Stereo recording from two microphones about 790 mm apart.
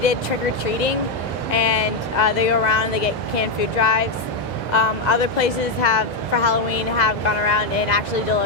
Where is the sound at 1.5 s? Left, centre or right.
Left.